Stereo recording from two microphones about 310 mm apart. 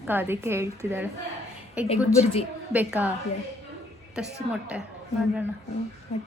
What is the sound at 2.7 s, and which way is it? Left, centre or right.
Speech, centre.